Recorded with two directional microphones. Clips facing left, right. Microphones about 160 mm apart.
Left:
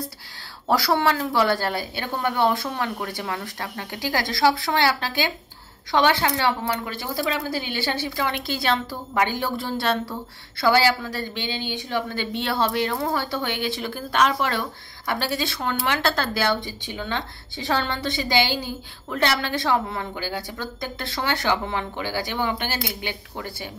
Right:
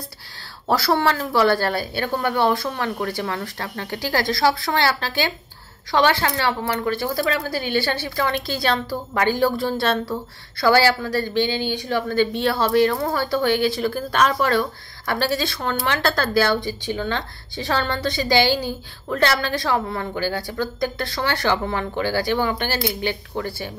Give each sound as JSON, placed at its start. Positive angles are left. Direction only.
{"t": 0.7, "sound": "a woman's voice", "side_deg": 15}
{"t": 17.8, "sound": "a woman's voice", "side_deg": -45}
{"t": 18.1, "sound": "a woman's voice", "side_deg": 20}